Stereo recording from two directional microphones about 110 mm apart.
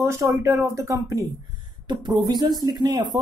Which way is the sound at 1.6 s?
40° right (ahead or behind).